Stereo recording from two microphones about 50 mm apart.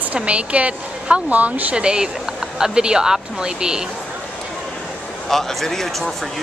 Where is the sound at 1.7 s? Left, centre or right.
Centre.